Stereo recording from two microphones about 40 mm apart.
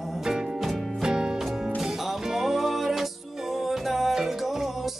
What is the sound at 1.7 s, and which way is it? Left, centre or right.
Music, centre.